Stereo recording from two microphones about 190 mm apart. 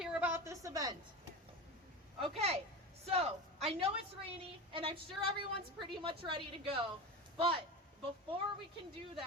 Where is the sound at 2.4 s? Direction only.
35° right (ahead or behind).